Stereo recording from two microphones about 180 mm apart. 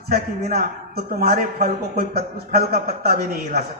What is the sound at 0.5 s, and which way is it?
A man's voice, 55° right (ahead or behind).